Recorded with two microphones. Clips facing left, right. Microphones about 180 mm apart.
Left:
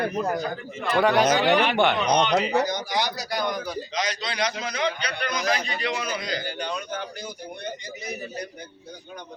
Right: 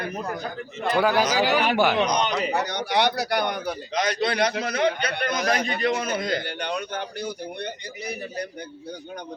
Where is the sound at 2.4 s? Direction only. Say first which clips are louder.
Left 2 dB; 65° right (ahead or behind).